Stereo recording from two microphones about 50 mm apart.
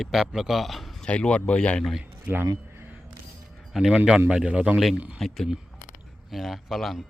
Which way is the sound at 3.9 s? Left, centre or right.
Centre.